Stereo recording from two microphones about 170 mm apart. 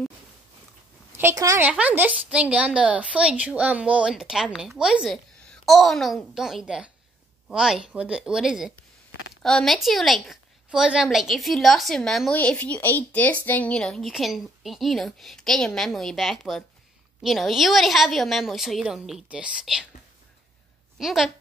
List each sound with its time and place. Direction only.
1.1 s a woman's voice: 15° right (ahead or behind)
1.7 s a woman's voice: 10° right (ahead or behind)
21.0 s a woman's voice: centre (ahead or behind)